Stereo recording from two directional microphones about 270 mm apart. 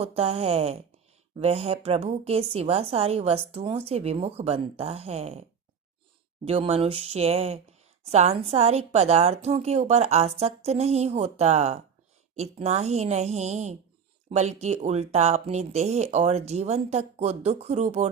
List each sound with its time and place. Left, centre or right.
0.0 s speech: right